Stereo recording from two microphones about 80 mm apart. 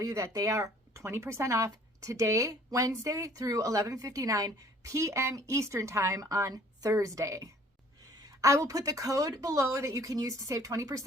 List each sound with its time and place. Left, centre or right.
0.0 s speech: right